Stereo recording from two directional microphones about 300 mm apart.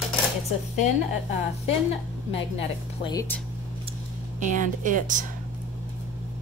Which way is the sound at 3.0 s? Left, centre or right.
Centre.